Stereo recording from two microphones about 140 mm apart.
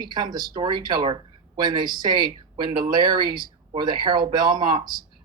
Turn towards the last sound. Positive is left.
turn(degrees=-30)  # may be behind; listen again after turning